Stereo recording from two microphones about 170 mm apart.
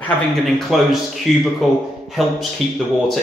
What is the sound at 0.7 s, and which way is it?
Speech, centre (ahead or behind).